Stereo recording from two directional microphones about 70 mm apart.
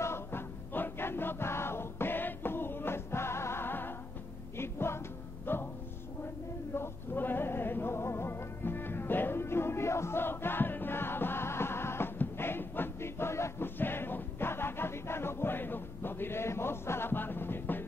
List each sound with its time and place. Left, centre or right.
0.0 s music: left
6.7 s music: left